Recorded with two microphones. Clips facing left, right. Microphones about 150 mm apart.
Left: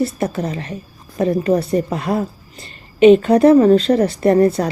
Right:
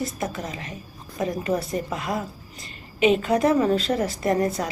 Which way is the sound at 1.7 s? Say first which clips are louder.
Left 9 dB; 35° left (ahead or behind).